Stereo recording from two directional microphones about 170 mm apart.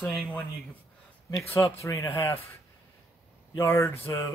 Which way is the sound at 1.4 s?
15° left (ahead or behind).